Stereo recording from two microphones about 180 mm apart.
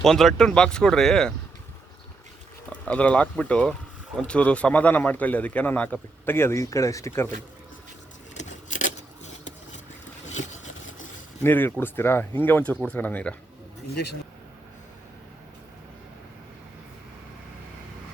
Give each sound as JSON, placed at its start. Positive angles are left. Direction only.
{"t": 0.0, "sound": "speech", "side_deg": 0}
{"t": 2.6, "sound": "speech", "side_deg": 5}
{"t": 8.4, "sound": "a sound", "side_deg": 45}
{"t": 11.4, "sound": "speech", "side_deg": 10}
{"t": 13.9, "sound": "speech", "side_deg": 65}